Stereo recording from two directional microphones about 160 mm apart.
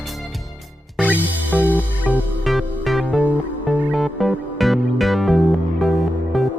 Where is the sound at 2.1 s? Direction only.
10° left (ahead or behind).